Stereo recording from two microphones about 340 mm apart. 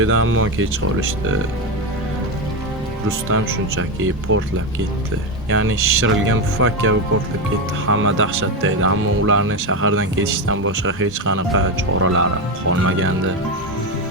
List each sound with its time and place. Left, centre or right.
0.0 s speech: right
3.2 s speech: right
5.5 s speech: right